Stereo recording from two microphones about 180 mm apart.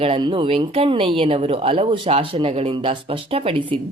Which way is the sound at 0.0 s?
30° right (ahead or behind).